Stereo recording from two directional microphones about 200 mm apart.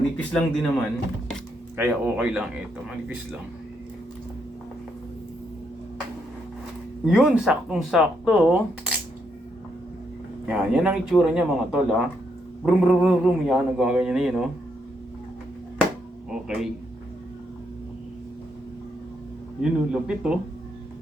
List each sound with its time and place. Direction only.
0.2 s speech: 5° left (ahead or behind)
1.7 s speech: 10° right (ahead or behind)
7.0 s speech: 5° right (ahead or behind)
10.4 s speech: 5° right (ahead or behind)
16.3 s a sound: 5° right (ahead or behind)
19.9 s speech: 5° right (ahead or behind)